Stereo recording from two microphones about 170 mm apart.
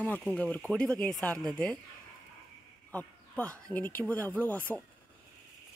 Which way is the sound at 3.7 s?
10° left (ahead or behind).